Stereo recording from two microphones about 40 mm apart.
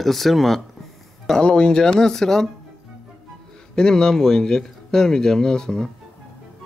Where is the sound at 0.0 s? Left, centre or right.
Centre.